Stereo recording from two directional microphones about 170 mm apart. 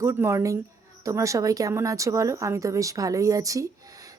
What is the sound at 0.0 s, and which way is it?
A woman's voice, 15° right (ahead or behind).